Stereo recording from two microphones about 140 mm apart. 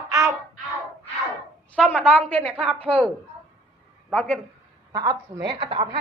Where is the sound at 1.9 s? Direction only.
5° left (ahead or behind).